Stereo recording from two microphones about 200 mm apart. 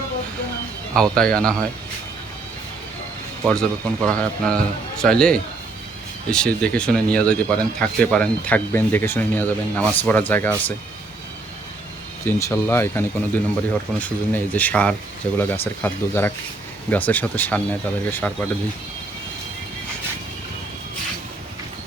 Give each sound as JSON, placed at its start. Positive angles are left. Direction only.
{"t": 0.9, "sound": "a man's voice", "side_deg": 5}
{"t": 3.4, "sound": "a man's voice", "side_deg": 5}
{"t": 12.2, "sound": "speech", "side_deg": 15}